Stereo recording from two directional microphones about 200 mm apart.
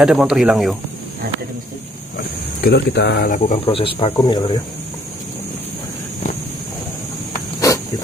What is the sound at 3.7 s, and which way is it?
Speech, 25° left (ahead or behind).